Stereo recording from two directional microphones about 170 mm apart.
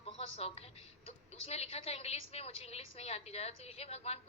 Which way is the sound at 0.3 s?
35° left (ahead or behind).